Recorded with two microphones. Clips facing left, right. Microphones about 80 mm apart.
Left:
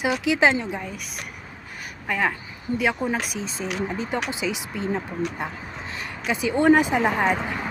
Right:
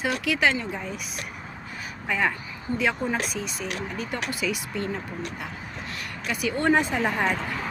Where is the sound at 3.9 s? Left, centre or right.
Left.